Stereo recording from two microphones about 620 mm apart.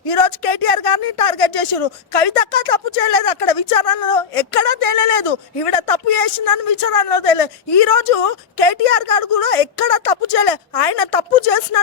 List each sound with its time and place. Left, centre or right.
0.0 s speech: left